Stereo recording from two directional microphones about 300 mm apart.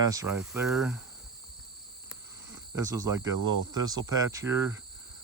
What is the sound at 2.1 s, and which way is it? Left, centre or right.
Cricket, centre.